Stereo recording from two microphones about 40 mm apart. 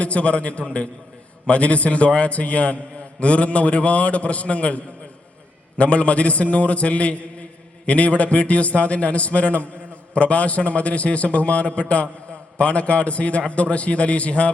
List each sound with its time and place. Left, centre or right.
0.0 s a man's voice: left